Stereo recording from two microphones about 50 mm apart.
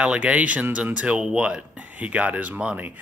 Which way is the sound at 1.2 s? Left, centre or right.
Centre.